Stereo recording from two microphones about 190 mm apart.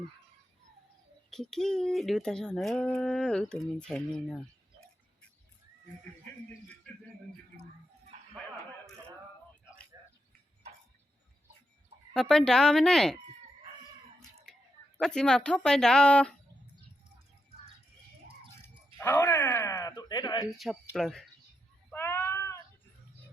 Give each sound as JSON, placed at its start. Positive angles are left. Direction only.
{"t": 1.3, "sound": "speech", "side_deg": 0}
{"t": 7.5, "sound": "a sound", "side_deg": -45}
{"t": 9.9, "sound": "a sound", "side_deg": -15}
{"t": 12.1, "sound": "speech", "side_deg": 5}
{"t": 14.9, "sound": "speech", "side_deg": 5}
{"t": 18.9, "sound": "speech", "side_deg": 15}
{"t": 20.6, "sound": "speech", "side_deg": 0}
{"t": 21.8, "sound": "cat", "side_deg": 10}